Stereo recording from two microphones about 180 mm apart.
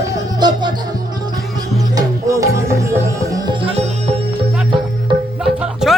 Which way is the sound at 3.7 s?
35° right (ahead or behind).